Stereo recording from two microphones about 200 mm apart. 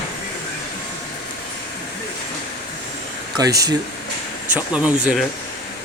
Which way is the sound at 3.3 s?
20° right (ahead or behind).